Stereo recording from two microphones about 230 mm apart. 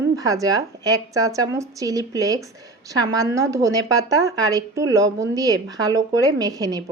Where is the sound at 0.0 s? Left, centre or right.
Centre.